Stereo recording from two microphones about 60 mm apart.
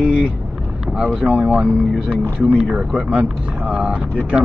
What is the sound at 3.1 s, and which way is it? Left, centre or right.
Speech, right.